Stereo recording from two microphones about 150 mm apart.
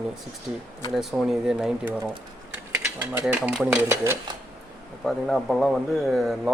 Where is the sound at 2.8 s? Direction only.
15° right (ahead or behind).